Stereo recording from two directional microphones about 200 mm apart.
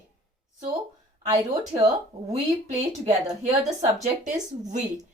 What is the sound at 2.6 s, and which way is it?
A woman's voice, 35° right (ahead or behind).